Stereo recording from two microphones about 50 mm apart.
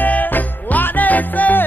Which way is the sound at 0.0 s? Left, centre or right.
Left.